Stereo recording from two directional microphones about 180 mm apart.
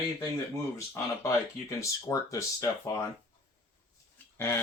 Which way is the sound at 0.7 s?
15° left (ahead or behind).